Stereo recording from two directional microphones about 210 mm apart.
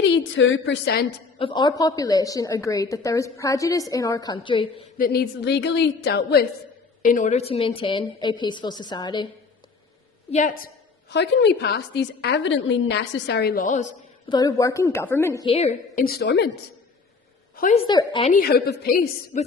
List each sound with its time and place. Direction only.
0.0 s a woman's voice: 60° left (ahead or behind)
1.4 s a woman's voice: 25° left (ahead or behind)
4.9 s a woman's voice: 45° left (ahead or behind)
7.0 s a woman's voice: 40° left (ahead or behind); by 9.2 s 20° left (ahead or behind)
10.3 s a woman's voice: 35° left (ahead or behind)
11.1 s a woman's voice: 55° left (ahead or behind); by 13.9 s 35° left (ahead or behind)
14.3 s a woman's voice: 20° left (ahead or behind)
15.4 s a woman's voice: 30° left (ahead or behind)
16.0 s a woman's voice: 50° left (ahead or behind)
17.6 s a woman's voice: 35° left (ahead or behind)
17.8 s a woman's voice: 20° left (ahead or behind)
18.3 s a woman's voice: 45° left (ahead or behind)